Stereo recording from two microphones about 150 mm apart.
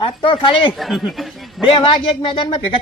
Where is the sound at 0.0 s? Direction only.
35° left (ahead or behind).